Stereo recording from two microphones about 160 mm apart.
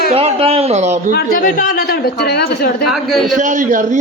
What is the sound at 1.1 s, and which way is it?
Speech, 60° left (ahead or behind).